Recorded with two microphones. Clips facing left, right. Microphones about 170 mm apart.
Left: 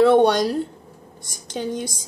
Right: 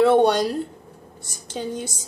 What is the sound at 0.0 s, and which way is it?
A woman's voice, 5° right (ahead or behind).